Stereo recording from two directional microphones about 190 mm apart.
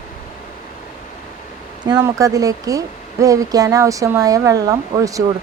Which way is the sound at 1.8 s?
20° right (ahead or behind).